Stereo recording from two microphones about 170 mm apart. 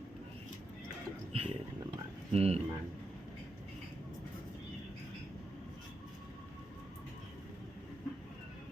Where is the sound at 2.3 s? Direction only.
35° right (ahead or behind).